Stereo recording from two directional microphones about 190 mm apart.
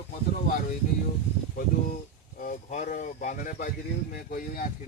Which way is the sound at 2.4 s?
40° left (ahead or behind).